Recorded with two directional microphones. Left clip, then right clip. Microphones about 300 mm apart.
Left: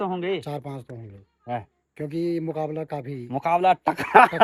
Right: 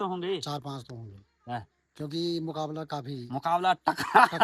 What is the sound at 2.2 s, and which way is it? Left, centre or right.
Speech, centre.